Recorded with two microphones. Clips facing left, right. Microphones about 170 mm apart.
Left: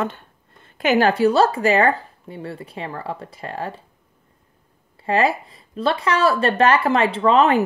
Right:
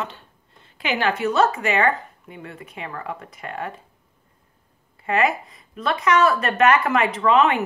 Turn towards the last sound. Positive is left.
turn(degrees=35)  # may be behind; listen again after turning